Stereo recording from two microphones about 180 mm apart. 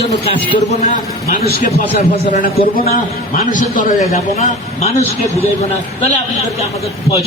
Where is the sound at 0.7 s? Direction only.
45° left (ahead or behind).